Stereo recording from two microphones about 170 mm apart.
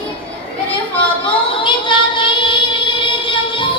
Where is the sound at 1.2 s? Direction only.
30° left (ahead or behind).